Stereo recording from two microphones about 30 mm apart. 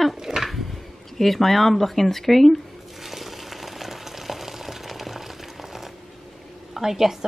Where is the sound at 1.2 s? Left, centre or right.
Centre.